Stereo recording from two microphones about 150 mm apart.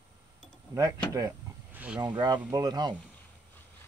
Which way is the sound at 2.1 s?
30° right (ahead or behind).